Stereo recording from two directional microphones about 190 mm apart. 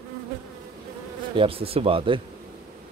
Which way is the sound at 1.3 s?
30° right (ahead or behind).